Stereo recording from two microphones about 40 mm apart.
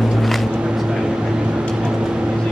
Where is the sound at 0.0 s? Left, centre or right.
Centre.